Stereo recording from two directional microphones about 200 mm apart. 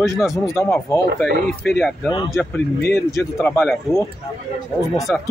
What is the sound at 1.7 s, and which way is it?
Speech, centre (ahead or behind).